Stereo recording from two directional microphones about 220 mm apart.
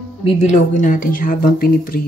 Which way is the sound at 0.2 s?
30° left (ahead or behind).